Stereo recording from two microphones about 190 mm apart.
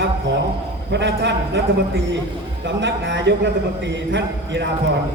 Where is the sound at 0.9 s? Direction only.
65° right (ahead or behind).